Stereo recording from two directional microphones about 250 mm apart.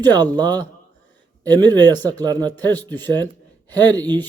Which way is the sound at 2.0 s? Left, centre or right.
Centre.